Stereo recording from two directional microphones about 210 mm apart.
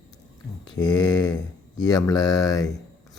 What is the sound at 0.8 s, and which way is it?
Speech, 20° left (ahead or behind).